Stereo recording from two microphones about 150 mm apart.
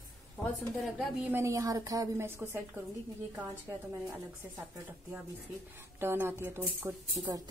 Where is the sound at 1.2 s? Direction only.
15° right (ahead or behind).